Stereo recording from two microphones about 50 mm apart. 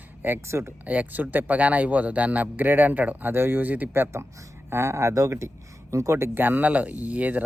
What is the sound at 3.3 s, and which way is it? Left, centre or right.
Speech, right.